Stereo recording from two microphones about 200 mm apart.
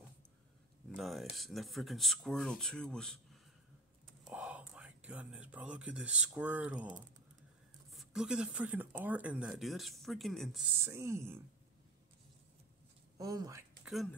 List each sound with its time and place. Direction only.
0.9 s speech: centre (ahead or behind)
4.2 s speech: 5° right (ahead or behind)
7.9 s speech: centre (ahead or behind)
10.8 s speech: 15° right (ahead or behind)
13.2 s speech: 20° right (ahead or behind)